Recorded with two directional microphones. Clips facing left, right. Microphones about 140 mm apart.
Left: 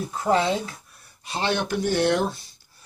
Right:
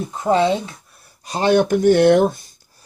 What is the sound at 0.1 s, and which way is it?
Speech, 25° right (ahead or behind).